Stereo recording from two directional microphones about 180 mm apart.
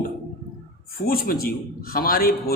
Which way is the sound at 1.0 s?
55° left (ahead or behind).